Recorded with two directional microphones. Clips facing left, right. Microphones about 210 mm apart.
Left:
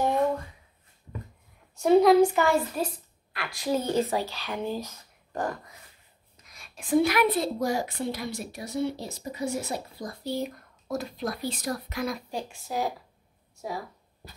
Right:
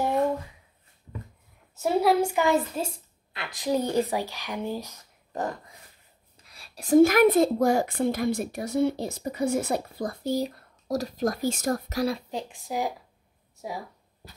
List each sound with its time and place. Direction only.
1.8 s speech: 5° right (ahead or behind)
6.4 s a woman's voice: 35° right (ahead or behind); by 10.3 s 55° right (ahead or behind)
10.3 s speech: 35° right (ahead or behind)
12.3 s speech: 20° right (ahead or behind)